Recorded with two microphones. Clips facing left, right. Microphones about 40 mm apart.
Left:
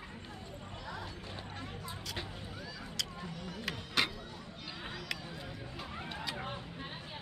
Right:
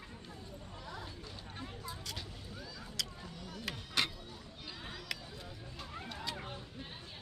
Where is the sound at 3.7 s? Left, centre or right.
Centre.